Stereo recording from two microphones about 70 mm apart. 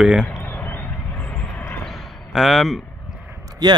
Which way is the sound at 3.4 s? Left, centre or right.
Right.